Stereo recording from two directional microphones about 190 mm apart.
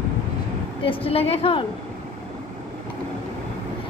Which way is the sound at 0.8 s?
30° left (ahead or behind).